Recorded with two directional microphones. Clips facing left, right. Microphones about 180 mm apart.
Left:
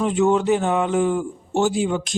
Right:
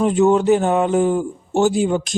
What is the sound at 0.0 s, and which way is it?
Speech, 40° right (ahead or behind).